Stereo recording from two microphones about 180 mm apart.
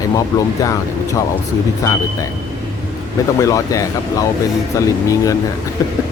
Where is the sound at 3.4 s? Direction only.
20° left (ahead or behind).